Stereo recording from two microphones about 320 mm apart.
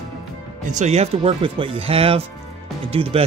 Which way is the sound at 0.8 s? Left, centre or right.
Centre.